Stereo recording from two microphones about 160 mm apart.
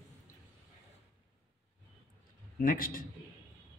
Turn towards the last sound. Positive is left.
turn(degrees=60)  # may be behind; listen again after turning